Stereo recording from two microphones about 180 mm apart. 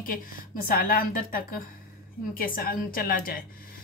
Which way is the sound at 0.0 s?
50° left (ahead or behind).